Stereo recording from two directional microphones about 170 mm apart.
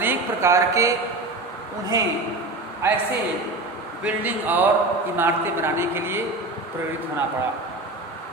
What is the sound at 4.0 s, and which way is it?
A woman's voice, 10° right (ahead or behind).